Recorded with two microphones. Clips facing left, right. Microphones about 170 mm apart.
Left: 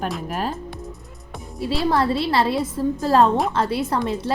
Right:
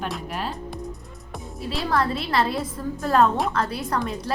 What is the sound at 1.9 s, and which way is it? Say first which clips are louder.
A woman's voice: left 3 dB; 30° left (ahead or behind).